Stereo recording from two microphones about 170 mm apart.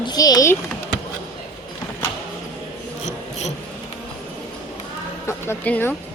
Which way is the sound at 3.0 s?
40° left (ahead or behind).